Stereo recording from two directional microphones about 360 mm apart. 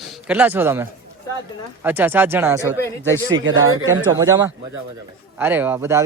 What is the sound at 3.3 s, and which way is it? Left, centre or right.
Speech, right.